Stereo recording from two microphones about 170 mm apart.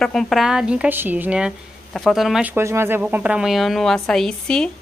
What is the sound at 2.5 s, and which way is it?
A woman's voice, 15° right (ahead or behind).